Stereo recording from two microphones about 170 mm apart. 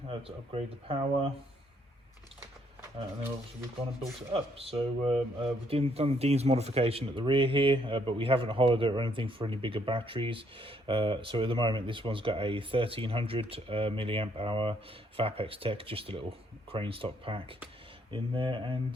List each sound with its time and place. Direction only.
0.1 s speech: 35° right (ahead or behind)
4.3 s speech: 35° right (ahead or behind)